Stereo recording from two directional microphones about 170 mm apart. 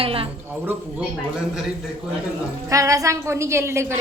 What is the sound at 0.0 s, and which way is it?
Speech, 35° right (ahead or behind).